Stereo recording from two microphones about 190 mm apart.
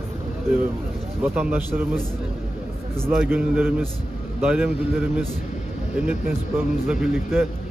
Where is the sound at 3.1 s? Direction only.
5° right (ahead or behind).